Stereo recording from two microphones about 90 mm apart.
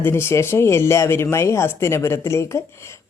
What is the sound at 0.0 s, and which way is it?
Speech, 25° left (ahead or behind).